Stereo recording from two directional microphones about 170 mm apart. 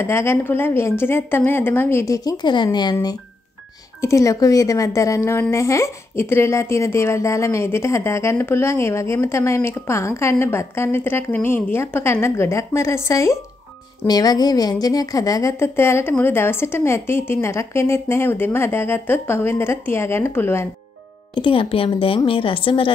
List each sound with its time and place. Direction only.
0.0 s a woman's voice: 15° left (ahead or behind)
21.4 s a woman's voice: 30° left (ahead or behind)